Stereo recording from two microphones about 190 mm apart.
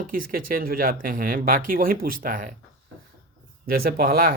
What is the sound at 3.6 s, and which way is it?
Speech, 50° right (ahead or behind).